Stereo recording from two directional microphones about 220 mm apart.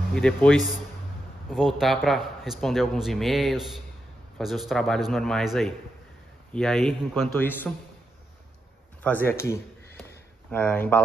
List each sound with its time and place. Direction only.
0.1 s a man's voice: 5° left (ahead or behind)
9.0 s speech: 10° left (ahead or behind)